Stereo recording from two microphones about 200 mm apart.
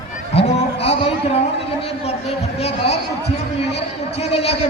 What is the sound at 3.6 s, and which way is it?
A man's voice, 30° left (ahead or behind).